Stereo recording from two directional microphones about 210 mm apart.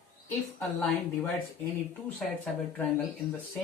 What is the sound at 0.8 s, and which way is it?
Speech, 5° left (ahead or behind).